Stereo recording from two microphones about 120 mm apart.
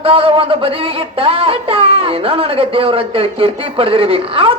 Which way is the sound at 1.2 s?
50° right (ahead or behind).